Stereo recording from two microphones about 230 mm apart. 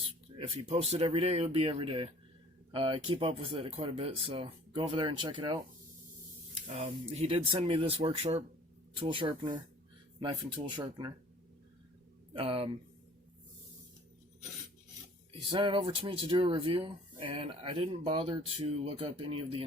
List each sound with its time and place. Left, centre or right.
0.0 s speech: right
6.7 s speech: right
10.8 s speech: centre
12.3 s speech: right
15.3 s speech: right